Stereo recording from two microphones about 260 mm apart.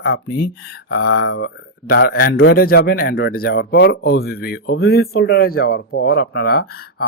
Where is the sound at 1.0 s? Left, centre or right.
Left.